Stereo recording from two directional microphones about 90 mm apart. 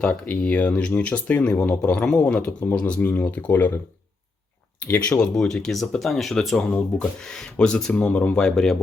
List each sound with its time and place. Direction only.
0.1 s speech: 15° left (ahead or behind)
4.8 s speech: 15° left (ahead or behind)